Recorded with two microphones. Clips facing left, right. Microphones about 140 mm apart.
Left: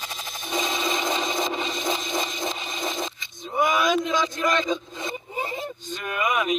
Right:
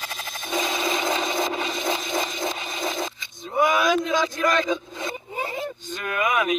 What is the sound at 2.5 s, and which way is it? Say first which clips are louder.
Coin: right 1 dB; 5° right (ahead or behind).